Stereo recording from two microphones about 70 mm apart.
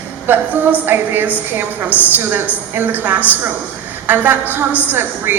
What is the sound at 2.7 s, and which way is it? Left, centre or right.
A man's voice, right.